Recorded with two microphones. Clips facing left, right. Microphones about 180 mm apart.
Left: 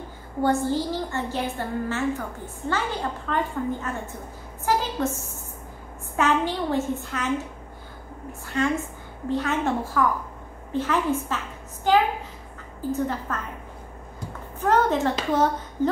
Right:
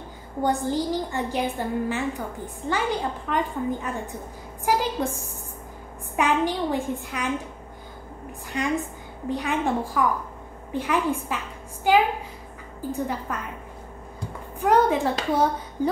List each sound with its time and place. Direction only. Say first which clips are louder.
0.4 s a woman's voice: left 1 dB; 15° right (ahead or behind)
8.3 s a woman's voice: left 2 dB; 15° right (ahead or behind)
14.6 s a woman's voice: right 1 dB; 10° right (ahead or behind)